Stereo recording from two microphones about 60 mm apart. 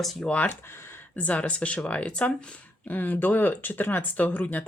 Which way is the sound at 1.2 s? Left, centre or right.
Left.